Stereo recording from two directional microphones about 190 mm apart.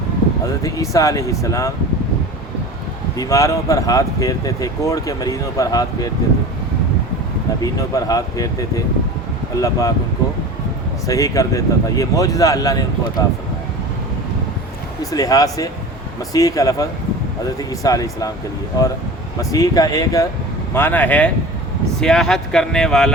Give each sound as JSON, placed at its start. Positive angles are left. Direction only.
{"t": 0.6, "sound": "speech", "side_deg": 15}
{"t": 3.2, "sound": "speech", "side_deg": 15}
{"t": 7.6, "sound": "speech", "side_deg": 20}
{"t": 11.0, "sound": "speech", "side_deg": 15}
{"t": 15.1, "sound": "speech", "side_deg": 20}
{"t": 19.4, "sound": "speech", "side_deg": 20}